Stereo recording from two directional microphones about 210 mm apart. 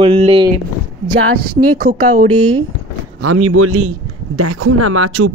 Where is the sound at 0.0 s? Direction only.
25° right (ahead or behind).